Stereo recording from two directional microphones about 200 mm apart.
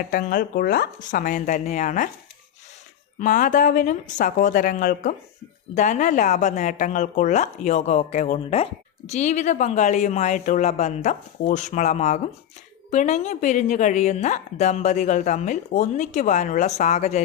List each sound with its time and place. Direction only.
0.1 s speech: 40° left (ahead or behind)
3.2 s speech: 40° left (ahead or behind)